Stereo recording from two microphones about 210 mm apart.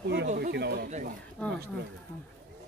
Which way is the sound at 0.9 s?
35° right (ahead or behind).